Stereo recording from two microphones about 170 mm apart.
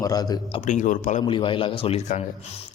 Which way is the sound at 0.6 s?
45° left (ahead or behind).